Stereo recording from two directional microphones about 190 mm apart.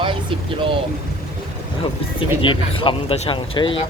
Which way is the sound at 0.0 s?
25° right (ahead or behind).